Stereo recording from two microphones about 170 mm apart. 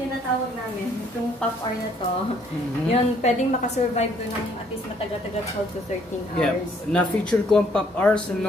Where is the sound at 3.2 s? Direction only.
45° left (ahead or behind).